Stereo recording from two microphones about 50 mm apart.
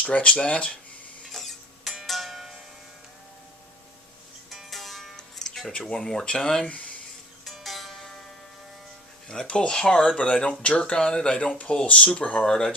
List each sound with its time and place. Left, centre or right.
0.0 s speech: left
1.3 s printer: centre
2.0 s music: centre
4.5 s music: centre
5.9 s speech: centre
6.2 s speech: left
7.4 s music: centre
9.3 s speech: centre
10.2 s speech: left
11.3 s speech: left